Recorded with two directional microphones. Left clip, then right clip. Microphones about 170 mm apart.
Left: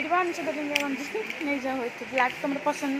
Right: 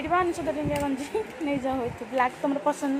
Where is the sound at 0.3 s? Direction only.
45° right (ahead or behind).